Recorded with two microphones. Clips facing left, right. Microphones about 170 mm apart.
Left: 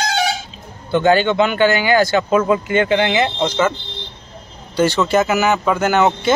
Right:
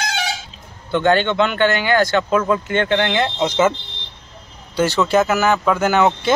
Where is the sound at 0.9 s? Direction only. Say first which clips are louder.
Left 2 dB; 5° left (ahead or behind).